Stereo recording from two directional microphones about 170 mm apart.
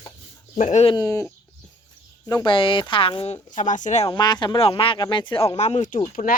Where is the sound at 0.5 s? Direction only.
40° left (ahead or behind).